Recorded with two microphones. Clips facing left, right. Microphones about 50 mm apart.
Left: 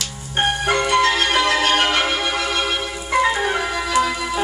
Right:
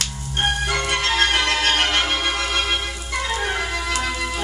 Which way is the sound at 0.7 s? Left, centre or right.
Left.